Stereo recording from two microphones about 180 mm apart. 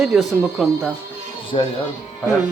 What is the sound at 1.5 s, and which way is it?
Speech, 30° left (ahead or behind).